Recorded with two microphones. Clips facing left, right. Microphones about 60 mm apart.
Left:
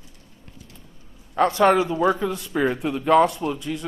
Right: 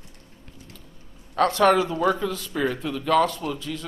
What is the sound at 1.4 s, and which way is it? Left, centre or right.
A man's voice, centre.